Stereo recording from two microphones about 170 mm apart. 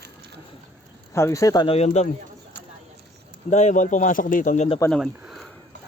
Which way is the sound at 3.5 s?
45° left (ahead or behind).